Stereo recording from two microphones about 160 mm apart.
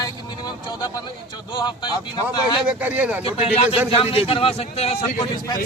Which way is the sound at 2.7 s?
10° right (ahead or behind).